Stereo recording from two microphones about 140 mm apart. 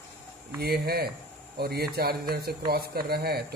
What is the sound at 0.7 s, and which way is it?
Speech, 90° right.